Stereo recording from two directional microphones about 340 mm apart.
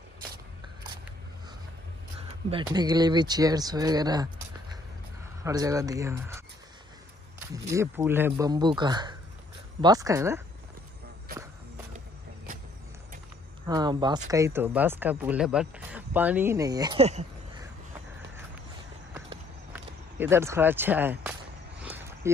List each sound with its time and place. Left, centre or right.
2.5 s speech: centre
5.4 s speech: centre
13.7 s speech: centre
19.1 s horse: centre
21.8 s a sound: centre